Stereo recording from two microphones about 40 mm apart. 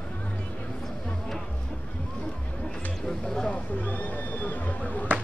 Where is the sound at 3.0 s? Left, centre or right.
Centre.